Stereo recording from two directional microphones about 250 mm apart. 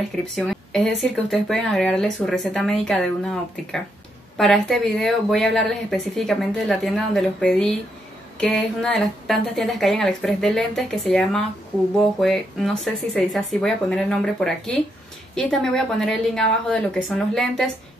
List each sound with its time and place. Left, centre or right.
0.4 s speech: centre
4.4 s speech: centre